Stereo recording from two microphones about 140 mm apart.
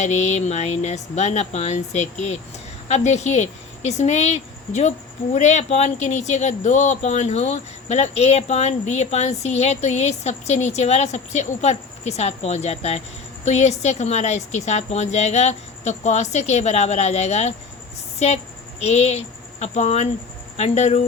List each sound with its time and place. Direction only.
0.0 s speech: 55° left (ahead or behind)
18.8 s speech: 50° left (ahead or behind)